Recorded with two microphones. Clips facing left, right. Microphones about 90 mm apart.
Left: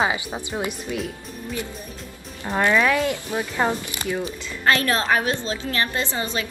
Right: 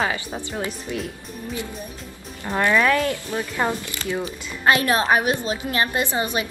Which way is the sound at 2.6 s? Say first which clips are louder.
Even; 15° left (ahead or behind).